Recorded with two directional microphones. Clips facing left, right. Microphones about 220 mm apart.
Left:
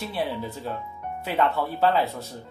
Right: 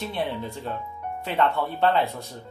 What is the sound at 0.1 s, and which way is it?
Speech, 5° left (ahead or behind).